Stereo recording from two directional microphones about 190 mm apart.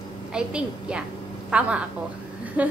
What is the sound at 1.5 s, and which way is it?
A woman's voice, 5° right (ahead or behind).